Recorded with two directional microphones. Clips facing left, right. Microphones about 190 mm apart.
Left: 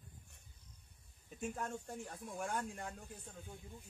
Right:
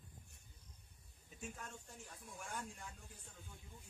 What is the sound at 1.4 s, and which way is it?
Speech, 55° left (ahead or behind).